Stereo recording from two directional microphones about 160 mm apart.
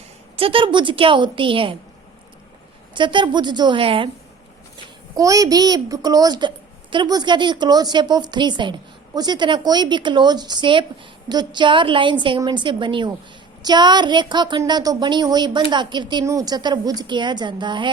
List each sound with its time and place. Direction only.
0.3 s a woman's voice: 35° right (ahead or behind)
2.9 s a woman's voice: 30° right (ahead or behind)
5.1 s a woman's voice: 20° right (ahead or behind)